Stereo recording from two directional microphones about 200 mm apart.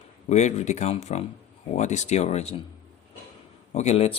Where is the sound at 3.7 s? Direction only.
35° left (ahead or behind).